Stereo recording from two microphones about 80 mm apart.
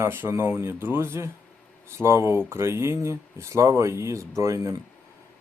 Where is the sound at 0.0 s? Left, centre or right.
Right.